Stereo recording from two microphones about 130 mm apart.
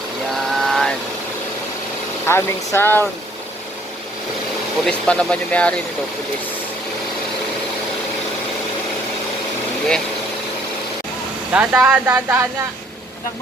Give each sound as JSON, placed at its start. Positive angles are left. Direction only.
{"t": 0.6, "sound": "vehicle", "side_deg": 5}
{"t": 2.2, "sound": "speech", "side_deg": 20}
{"t": 4.9, "sound": "speech", "side_deg": 10}
{"t": 11.5, "sound": "speech", "side_deg": -10}
{"t": 12.0, "sound": "speech", "side_deg": -20}